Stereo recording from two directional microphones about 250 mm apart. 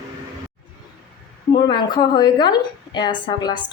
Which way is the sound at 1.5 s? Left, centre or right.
Centre.